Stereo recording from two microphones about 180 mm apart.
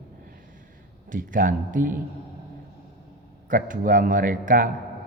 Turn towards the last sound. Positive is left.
turn(degrees=-45)  # may be behind; listen again after turning